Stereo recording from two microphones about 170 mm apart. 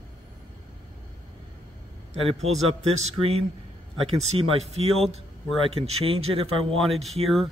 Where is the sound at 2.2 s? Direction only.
35° right (ahead or behind).